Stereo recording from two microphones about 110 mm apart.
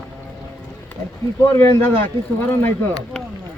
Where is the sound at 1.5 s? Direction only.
25° left (ahead or behind).